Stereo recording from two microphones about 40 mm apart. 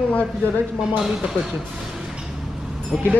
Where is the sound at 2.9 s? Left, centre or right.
Centre.